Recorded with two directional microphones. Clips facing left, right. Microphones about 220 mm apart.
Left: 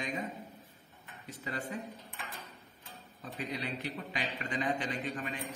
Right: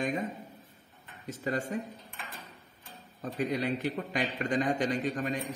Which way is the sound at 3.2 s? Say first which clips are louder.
Right 8 dB; 45° right (ahead or behind).